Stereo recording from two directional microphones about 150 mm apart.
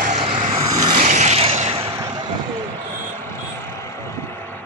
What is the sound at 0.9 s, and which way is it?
Vehicle, 60° right (ahead or behind).